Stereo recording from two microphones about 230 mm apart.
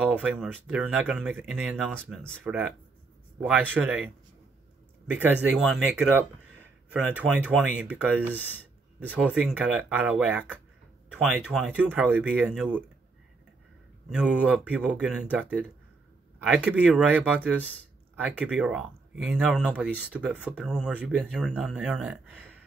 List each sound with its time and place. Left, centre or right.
0.0 s speech: centre
2.0 s speech: centre
2.3 s speech: centre
5.1 s speech: centre
14.0 s speech: centre